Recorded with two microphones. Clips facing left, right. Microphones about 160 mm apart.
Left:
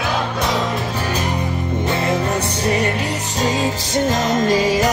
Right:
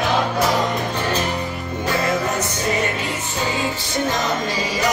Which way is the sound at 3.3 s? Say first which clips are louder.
Left 4 dB; 40° left (ahead or behind).